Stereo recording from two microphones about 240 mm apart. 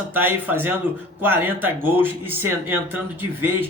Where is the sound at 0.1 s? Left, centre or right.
Centre.